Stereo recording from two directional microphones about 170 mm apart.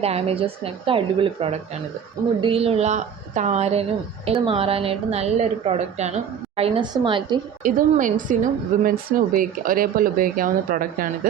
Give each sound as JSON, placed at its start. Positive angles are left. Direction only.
{"t": 0.0, "sound": "a woman's voice", "side_deg": -35}
{"t": 7.6, "sound": "a woman's voice", "side_deg": -50}